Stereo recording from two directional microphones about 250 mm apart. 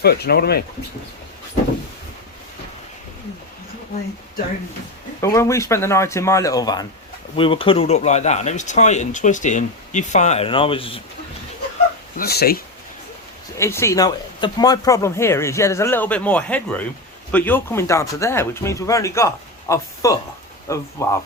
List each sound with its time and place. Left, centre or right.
0.0 s speech: left
5.2 s speech: centre
12.1 s speech: left
13.6 s speech: centre